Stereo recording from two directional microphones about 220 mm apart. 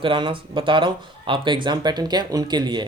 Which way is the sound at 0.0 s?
25° right (ahead or behind).